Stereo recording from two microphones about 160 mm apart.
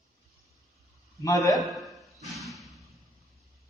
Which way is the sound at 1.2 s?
20° left (ahead or behind).